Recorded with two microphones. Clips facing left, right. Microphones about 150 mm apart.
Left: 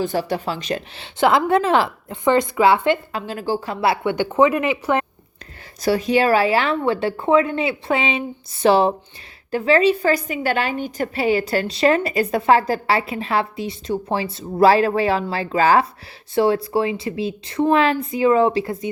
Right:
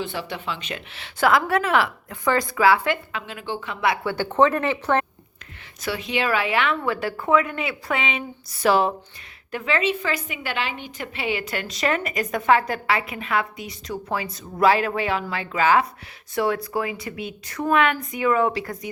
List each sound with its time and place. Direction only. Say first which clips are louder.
0.0 s a woman's voice: left 8 dB; 40° left (ahead or behind)
4.1 s speech: left 2 dB; 15° left (ahead or behind)
5.8 s a woman's voice: left 8 dB; 40° left (ahead or behind)